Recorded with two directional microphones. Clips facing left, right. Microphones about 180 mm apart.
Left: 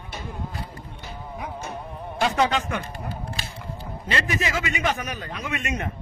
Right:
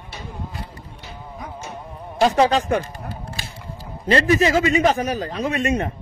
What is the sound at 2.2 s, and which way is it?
Speech, 35° right (ahead or behind).